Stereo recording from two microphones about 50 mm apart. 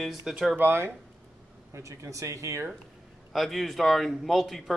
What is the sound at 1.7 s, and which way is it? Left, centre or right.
Speech, right.